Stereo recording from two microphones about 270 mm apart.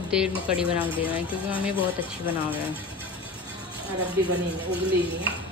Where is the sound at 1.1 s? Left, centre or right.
Centre.